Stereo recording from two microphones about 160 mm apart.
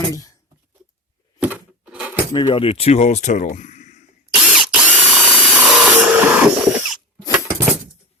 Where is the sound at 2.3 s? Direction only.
30° left (ahead or behind); by 4.0 s 50° left (ahead or behind).